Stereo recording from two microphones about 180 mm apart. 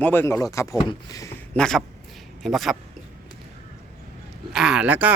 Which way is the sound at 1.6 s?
5° left (ahead or behind).